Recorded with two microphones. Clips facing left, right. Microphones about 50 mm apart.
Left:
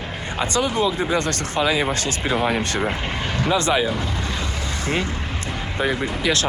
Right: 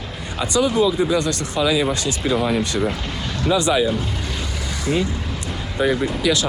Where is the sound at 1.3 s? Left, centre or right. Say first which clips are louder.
Right 1 dB; left.